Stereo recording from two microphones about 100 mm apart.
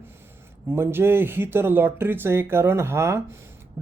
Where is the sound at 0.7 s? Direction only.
25° right (ahead or behind).